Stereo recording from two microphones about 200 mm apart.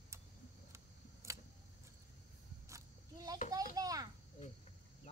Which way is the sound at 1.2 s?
15° right (ahead or behind).